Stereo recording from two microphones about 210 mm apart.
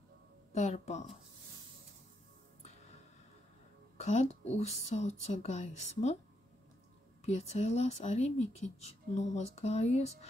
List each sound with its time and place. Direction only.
0.5 s a woman's voice: 35° left (ahead or behind)
4.0 s speech: 35° left (ahead or behind)
7.2 s speech: 30° left (ahead or behind)